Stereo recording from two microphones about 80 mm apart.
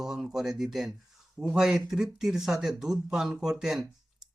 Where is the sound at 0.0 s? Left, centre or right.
Centre.